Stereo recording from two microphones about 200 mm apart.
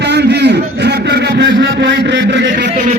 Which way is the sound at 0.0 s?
55° right (ahead or behind).